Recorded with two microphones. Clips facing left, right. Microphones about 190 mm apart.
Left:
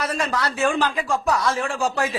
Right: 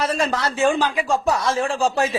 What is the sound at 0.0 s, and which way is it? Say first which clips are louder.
A man's voice: right 3 dB; 30° right (ahead or behind).